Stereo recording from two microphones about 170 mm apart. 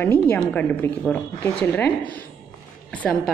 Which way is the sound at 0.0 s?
10° left (ahead or behind).